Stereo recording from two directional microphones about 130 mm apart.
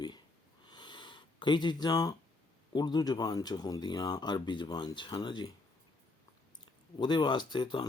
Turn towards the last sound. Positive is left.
turn(degrees=35)  # may be behind; listen again after turning